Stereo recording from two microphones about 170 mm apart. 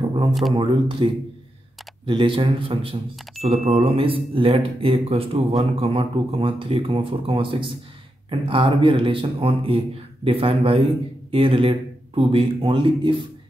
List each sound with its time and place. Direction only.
0.3 s speech: centre (ahead or behind)
0.6 s a man's voice: 30° right (ahead or behind)